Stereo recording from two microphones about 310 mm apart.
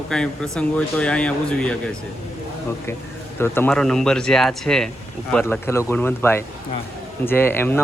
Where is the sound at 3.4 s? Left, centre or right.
Centre.